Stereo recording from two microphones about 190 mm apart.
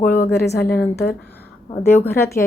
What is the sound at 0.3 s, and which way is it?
Speech, 60° left (ahead or behind).